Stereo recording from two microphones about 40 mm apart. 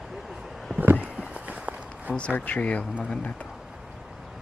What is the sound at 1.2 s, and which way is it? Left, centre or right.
Run, right.